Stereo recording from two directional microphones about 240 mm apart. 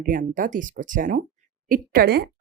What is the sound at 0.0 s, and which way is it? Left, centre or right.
Speech, right.